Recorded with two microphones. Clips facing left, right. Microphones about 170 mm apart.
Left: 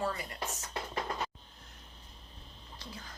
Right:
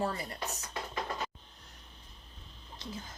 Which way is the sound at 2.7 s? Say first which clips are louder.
Right 4 dB; 25° right (ahead or behind).